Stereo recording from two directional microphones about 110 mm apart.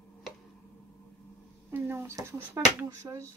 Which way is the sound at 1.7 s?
20° right (ahead or behind).